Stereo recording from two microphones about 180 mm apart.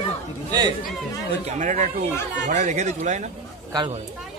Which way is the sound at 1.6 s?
45° right (ahead or behind).